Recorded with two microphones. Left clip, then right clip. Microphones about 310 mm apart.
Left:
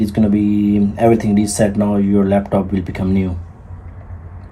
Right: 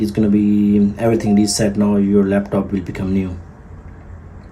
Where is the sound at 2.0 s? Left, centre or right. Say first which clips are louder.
Left 1 dB; centre.